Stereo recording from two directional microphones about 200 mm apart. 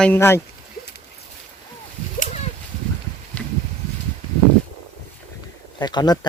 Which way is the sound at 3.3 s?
5° left (ahead or behind).